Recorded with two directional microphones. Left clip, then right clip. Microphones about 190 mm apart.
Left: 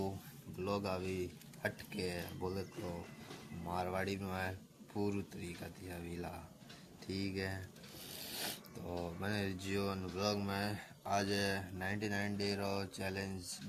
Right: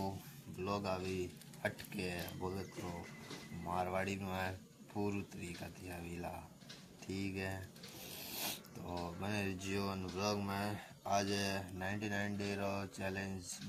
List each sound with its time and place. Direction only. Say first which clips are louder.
0.6 s speech: left 1 dB; 10° left (ahead or behind)
3.7 s speech: right 1 dB; 5° left (ahead or behind)
7.1 s speech: left 1 dB; 45° left (ahead or behind)
7.3 s speech: left 1 dB; 5° left (ahead or behind)
8.2 s filing: even; 5° left (ahead or behind)
9.6 s speech: left 2 dB; centre (ahead or behind)